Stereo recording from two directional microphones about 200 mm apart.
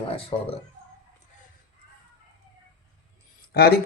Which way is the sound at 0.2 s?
30° left (ahead or behind).